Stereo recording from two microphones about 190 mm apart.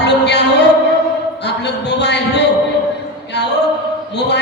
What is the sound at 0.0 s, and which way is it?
Music, 65° left (ahead or behind).